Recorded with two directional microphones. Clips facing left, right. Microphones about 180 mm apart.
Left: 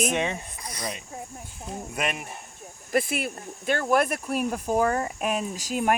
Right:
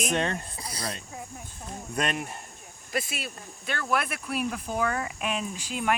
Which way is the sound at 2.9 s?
55° left (ahead or behind).